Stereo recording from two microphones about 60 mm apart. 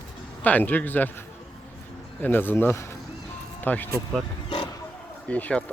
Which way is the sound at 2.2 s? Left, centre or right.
Left.